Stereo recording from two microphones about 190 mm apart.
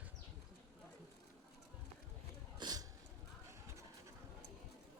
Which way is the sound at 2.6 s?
20° right (ahead or behind).